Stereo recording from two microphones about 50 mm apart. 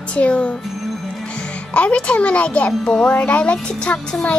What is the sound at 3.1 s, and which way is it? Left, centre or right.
Speech, left.